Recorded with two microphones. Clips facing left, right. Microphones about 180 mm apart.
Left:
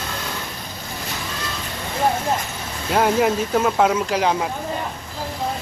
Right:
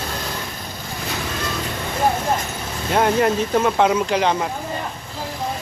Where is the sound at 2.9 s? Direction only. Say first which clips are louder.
Even; 5° left (ahead or behind).